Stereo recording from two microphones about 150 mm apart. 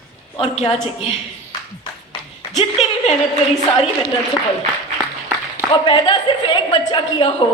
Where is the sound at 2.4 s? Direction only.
45° left (ahead or behind).